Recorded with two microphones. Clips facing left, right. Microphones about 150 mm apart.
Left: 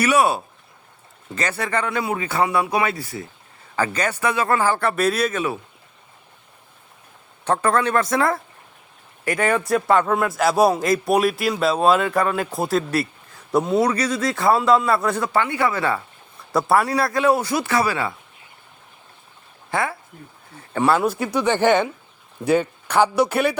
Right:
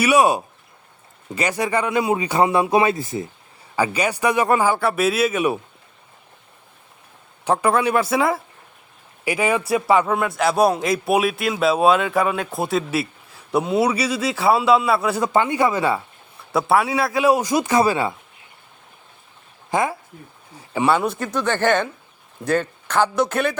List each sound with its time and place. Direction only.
0.0 s speech: 15° right (ahead or behind)
7.4 s a man's voice: 10° right (ahead or behind)
15.2 s speech: 20° right (ahead or behind)
16.5 s a man's voice: centre (ahead or behind)
17.2 s speech: 15° right (ahead or behind)
19.7 s speech: 15° right (ahead or behind)
20.6 s a man's voice: 5° right (ahead or behind)
21.3 s speech: 15° left (ahead or behind)